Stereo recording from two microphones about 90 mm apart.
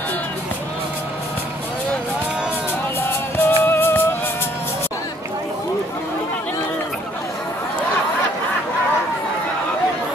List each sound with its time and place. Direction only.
3.1 s music: 25° left (ahead or behind)